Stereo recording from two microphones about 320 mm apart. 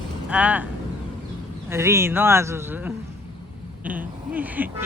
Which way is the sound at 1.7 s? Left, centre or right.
Centre.